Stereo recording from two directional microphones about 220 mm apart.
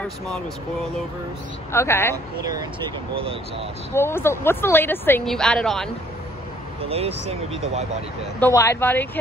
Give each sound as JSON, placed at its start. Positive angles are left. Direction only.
{"t": 1.7, "sound": "speech", "side_deg": 10}
{"t": 3.9, "sound": "speech", "side_deg": 10}
{"t": 6.9, "sound": "speech", "side_deg": -25}
{"t": 8.4, "sound": "speech", "side_deg": 10}